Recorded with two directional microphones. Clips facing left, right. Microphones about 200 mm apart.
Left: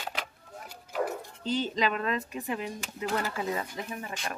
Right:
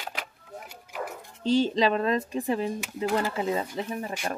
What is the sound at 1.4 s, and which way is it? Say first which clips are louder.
Speech: right 7 dB; 30° right (ahead or behind).